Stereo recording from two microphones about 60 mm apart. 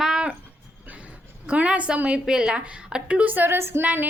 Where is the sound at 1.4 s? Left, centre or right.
Centre; by 3.8 s right.